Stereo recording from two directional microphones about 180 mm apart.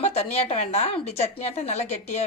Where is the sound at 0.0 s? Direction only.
35° left (ahead or behind).